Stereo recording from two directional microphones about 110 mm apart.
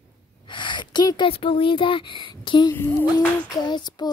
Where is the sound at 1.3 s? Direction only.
55° left (ahead or behind).